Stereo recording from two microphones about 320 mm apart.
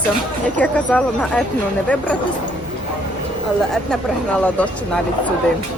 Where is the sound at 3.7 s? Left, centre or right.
Centre.